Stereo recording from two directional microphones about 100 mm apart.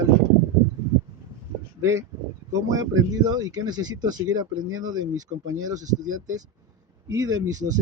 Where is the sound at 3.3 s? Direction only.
40° right (ahead or behind).